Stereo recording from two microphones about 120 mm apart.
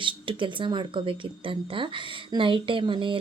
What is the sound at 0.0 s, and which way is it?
Speech, 45° right (ahead or behind).